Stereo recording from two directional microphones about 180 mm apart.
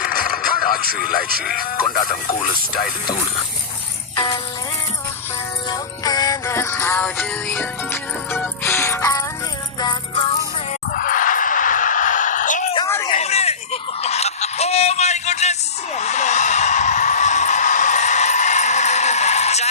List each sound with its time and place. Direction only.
0.0 s speech: 50° left (ahead or behind)
4.1 s music: 30° left (ahead or behind)
5.7 s music: 20° left (ahead or behind)
10.9 s a sound: 50° left (ahead or behind)